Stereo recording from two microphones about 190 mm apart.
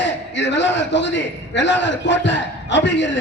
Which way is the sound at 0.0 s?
70° left (ahead or behind).